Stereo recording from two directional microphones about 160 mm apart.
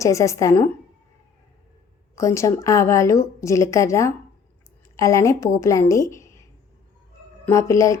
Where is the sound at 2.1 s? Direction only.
20° left (ahead or behind).